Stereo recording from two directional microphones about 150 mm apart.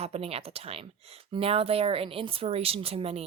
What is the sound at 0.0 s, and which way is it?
Speech, 45° right (ahead or behind).